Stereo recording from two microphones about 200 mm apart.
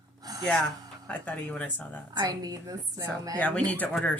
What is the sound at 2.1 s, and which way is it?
A woman's voice, 20° right (ahead or behind).